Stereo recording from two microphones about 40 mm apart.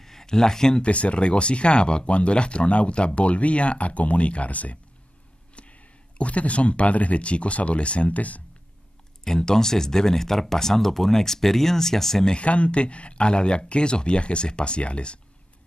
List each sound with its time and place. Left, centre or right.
0.0 s speech: centre
0.8 s speech: left
9.2 s speech: centre
12.3 s speech: left